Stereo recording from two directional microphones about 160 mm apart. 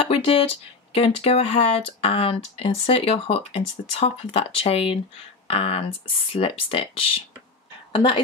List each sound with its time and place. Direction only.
0.0 s a woman's voice: 35° left (ahead or behind)